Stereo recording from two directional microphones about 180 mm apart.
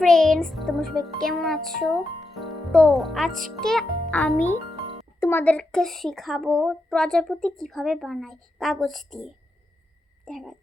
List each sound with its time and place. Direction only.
0.0 s a woman's voice: 5° left (ahead or behind)
10.2 s a woman's voice: centre (ahead or behind)